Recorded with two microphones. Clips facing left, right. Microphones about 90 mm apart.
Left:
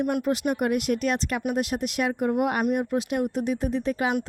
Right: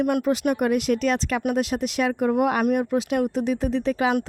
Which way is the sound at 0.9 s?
90° right.